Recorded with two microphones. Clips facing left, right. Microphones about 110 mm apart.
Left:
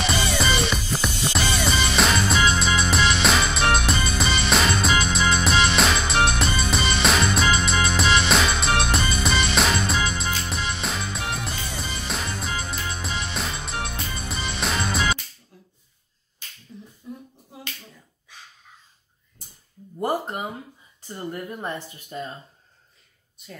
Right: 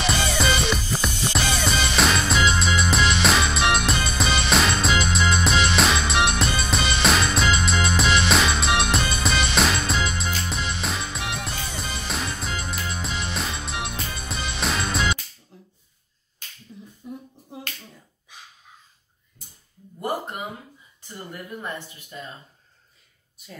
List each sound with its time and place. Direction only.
0.0 s music: centre (ahead or behind)
15.5 s finger snapping: 20° right (ahead or behind)
16.7 s finger snapping: 5° right (ahead or behind)
18.3 s a sound: 15° right (ahead or behind)
22.1 s speech: 35° left (ahead or behind)
23.4 s speech: centre (ahead or behind)